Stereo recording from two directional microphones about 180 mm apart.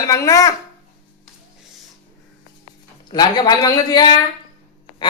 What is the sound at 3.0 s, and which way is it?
Speech, 25° left (ahead or behind).